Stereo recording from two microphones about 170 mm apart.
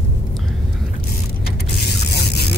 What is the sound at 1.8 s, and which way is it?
Vehicle, 75° left (ahead or behind).